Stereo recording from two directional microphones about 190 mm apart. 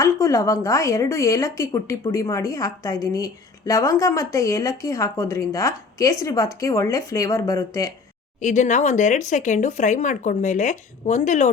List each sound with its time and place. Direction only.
0.0 s speech: 15° left (ahead or behind)
8.4 s speech: 40° left (ahead or behind)